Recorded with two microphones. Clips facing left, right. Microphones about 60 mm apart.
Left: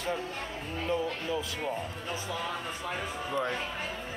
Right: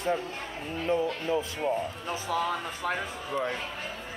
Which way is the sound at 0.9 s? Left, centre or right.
Right.